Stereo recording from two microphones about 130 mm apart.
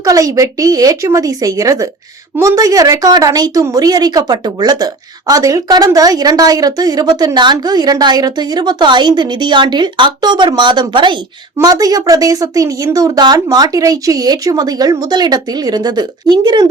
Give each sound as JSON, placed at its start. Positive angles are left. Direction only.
{"t": 0.0, "sound": "speech", "side_deg": -25}